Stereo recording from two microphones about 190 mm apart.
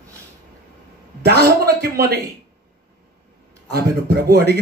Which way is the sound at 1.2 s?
55° right (ahead or behind).